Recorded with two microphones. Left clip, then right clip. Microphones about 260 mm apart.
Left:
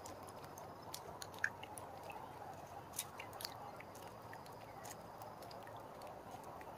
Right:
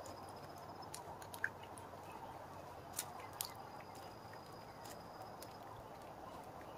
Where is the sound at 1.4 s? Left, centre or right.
Left.